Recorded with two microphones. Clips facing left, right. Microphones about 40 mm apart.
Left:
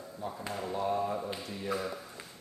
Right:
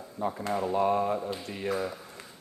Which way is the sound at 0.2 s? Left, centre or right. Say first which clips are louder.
Right 8 dB; right.